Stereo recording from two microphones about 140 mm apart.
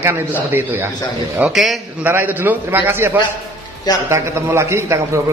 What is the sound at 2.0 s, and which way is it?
A man's voice, 15° right (ahead or behind).